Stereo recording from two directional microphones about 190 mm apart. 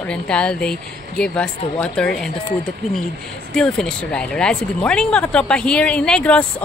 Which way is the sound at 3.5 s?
5° left (ahead or behind).